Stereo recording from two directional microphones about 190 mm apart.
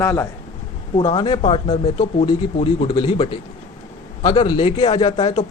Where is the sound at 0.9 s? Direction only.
25° left (ahead or behind).